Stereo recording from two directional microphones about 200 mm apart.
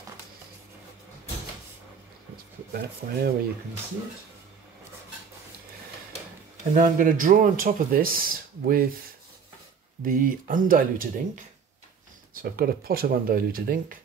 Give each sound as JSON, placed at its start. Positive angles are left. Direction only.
{"t": 2.7, "sound": "speech", "side_deg": -50}
{"t": 6.7, "sound": "speech", "side_deg": -45}
{"t": 10.0, "sound": "speech", "side_deg": -45}